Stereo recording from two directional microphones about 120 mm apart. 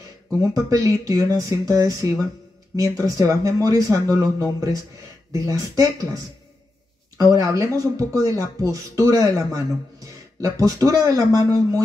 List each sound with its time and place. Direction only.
0.4 s speech: 30° right (ahead or behind)
7.2 s speech: 30° right (ahead or behind)